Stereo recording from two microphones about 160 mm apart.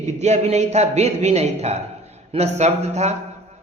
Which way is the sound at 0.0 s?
45° right (ahead or behind).